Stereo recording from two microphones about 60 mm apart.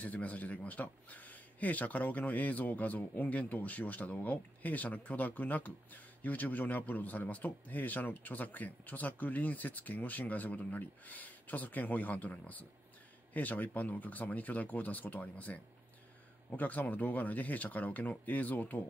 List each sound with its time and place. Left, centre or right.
0.0 s a man's voice: left